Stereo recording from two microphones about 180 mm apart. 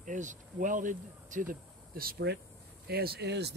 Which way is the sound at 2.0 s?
60° right (ahead or behind).